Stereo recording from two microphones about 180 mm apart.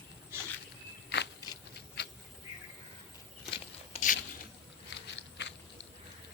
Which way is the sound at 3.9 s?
45° left (ahead or behind).